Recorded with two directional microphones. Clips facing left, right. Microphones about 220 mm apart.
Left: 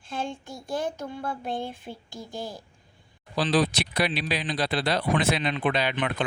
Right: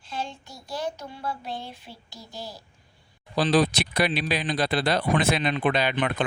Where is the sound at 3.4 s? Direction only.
45° right (ahead or behind).